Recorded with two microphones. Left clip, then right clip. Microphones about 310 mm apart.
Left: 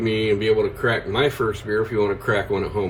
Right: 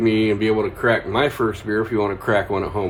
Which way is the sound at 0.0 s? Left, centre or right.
Right.